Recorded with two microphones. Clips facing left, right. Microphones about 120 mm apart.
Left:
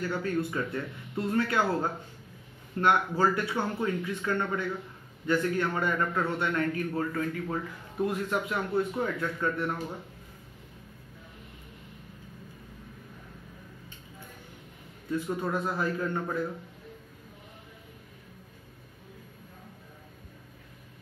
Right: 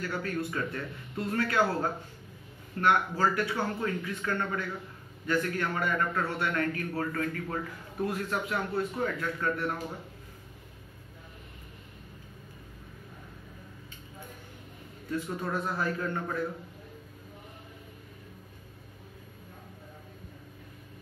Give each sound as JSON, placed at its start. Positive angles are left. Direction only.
{"t": 0.0, "sound": "a man's voice", "side_deg": 25}
{"t": 15.0, "sound": "a man's voice", "side_deg": 15}